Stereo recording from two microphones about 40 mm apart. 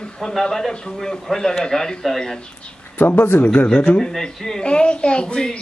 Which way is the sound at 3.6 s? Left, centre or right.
Left.